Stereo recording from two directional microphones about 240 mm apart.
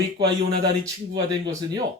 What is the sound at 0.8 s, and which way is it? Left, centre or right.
Speech, centre.